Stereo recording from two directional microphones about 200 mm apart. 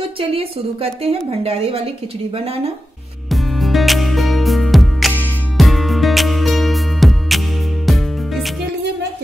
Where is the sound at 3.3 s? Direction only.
Centre (ahead or behind).